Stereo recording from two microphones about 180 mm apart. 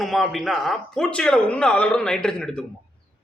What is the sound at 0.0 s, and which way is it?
A man's voice, centre (ahead or behind).